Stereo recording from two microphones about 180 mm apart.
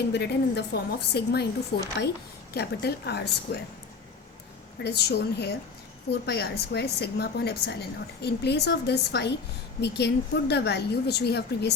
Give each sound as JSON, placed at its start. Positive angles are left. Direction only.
{"t": 0.1, "sound": "speech", "side_deg": 65}
{"t": 4.8, "sound": "a woman's voice", "side_deg": 65}